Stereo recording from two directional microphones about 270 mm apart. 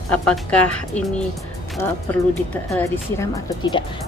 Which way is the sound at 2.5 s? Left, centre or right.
Centre.